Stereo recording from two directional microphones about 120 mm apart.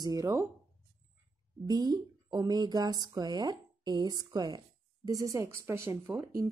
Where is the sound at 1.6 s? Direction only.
35° right (ahead or behind).